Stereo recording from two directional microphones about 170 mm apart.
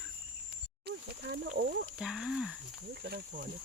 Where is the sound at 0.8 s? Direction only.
75° right (ahead or behind).